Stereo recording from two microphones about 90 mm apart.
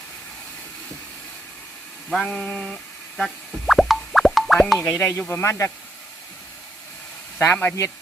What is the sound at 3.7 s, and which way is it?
Plop, centre (ahead or behind).